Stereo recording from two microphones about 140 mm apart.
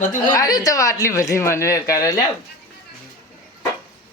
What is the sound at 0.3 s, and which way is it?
Speech, 25° left (ahead or behind).